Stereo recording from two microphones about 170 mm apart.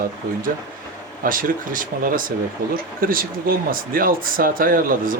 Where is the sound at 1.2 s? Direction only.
55° right (ahead or behind).